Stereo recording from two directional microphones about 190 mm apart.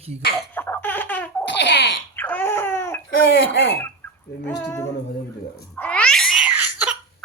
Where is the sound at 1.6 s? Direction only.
70° left (ahead or behind).